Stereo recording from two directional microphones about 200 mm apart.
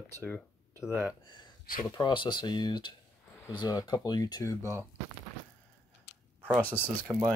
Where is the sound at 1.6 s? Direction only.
45° left (ahead or behind).